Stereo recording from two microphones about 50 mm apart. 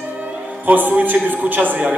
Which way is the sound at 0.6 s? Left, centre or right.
Right.